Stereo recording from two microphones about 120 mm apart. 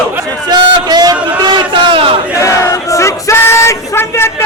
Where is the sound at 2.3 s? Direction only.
25° left (ahead or behind).